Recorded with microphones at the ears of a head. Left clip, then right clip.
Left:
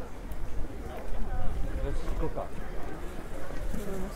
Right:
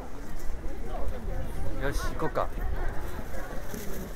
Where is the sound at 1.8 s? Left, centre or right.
Right.